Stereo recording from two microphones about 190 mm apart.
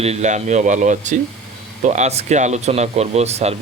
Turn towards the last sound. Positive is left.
turn(degrees=-35)  # may be behind; listen again after turning